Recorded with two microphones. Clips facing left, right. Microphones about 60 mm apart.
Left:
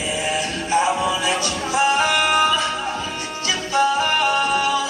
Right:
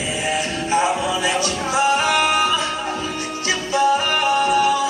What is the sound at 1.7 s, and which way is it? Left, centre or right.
Music, right.